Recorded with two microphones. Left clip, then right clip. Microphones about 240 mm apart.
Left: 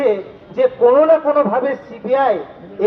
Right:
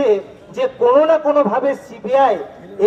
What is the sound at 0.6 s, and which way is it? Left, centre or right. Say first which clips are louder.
A man's voice: left 2 dB; right.